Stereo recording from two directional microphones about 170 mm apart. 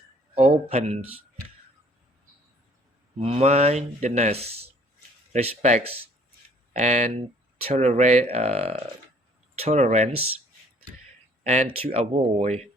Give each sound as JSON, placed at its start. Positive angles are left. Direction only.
{"t": 0.3, "sound": "speech", "side_deg": -35}
{"t": 3.2, "sound": "speech", "side_deg": -35}
{"t": 11.4, "sound": "speech", "side_deg": -35}